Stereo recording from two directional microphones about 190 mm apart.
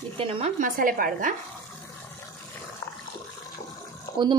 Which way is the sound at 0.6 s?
45° right (ahead or behind).